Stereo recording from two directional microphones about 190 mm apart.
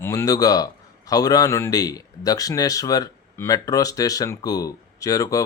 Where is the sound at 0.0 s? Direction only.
15° left (ahead or behind).